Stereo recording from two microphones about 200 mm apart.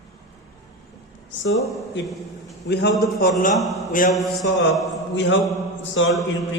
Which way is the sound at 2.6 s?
55° left (ahead or behind).